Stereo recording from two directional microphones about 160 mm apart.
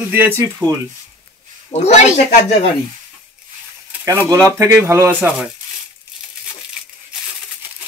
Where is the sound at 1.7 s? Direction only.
45° left (ahead or behind).